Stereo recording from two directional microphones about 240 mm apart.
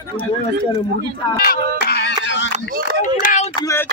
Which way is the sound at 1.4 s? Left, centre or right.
Left.